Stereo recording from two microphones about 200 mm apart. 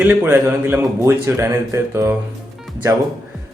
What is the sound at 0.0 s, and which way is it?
Speech, 5° right (ahead or behind).